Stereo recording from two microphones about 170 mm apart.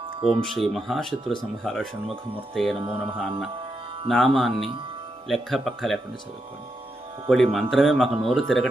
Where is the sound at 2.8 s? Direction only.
30° right (ahead or behind).